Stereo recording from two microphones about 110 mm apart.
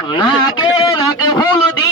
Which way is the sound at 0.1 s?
45° left (ahead or behind).